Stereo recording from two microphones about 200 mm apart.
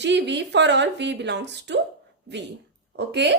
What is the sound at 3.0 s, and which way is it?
Speech, 60° right (ahead or behind).